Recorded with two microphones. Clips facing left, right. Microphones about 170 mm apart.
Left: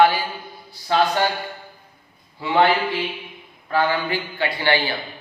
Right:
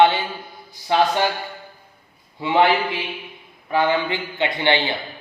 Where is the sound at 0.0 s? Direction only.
25° right (ahead or behind).